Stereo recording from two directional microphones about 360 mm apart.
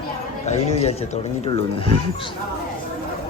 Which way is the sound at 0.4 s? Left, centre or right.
Centre.